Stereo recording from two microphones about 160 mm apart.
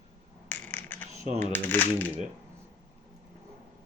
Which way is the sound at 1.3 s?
10° left (ahead or behind).